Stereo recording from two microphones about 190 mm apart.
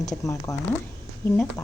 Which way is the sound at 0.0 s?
15° left (ahead or behind).